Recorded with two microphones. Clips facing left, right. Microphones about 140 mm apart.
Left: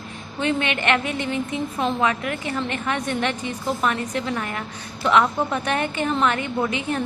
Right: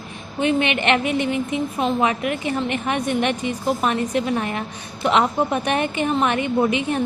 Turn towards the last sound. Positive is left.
turn(degrees=-20)  # may be behind; listen again after turning